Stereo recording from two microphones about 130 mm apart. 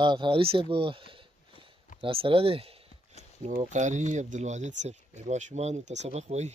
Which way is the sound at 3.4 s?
70° right (ahead or behind).